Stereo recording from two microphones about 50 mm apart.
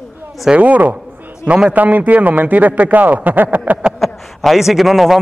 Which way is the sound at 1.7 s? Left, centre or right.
Right.